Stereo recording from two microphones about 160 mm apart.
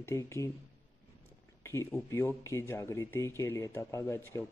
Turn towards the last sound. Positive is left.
turn(degrees=20)  # may be behind; listen again after turning